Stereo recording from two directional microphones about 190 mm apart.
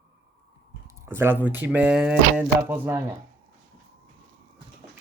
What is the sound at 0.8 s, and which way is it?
Speech, 15° right (ahead or behind).